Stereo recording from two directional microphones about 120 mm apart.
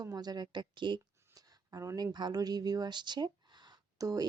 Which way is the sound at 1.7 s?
30° right (ahead or behind).